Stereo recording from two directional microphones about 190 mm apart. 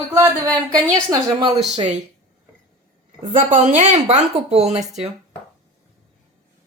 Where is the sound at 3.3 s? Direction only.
40° right (ahead or behind).